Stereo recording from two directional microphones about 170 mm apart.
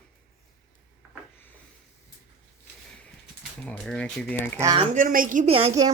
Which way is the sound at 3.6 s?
5° left (ahead or behind).